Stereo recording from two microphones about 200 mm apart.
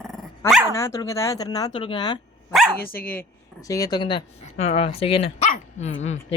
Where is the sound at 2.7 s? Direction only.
50° left (ahead or behind).